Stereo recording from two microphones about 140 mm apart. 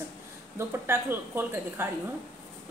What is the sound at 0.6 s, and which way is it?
Speech, 15° right (ahead or behind).